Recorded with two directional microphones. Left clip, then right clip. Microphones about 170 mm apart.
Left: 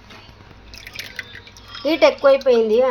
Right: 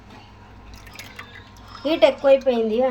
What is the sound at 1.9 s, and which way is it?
Speech, 35° left (ahead or behind).